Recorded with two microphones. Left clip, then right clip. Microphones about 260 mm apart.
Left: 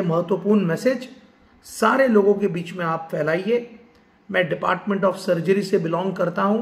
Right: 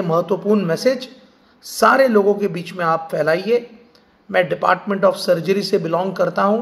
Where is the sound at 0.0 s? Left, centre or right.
Centre.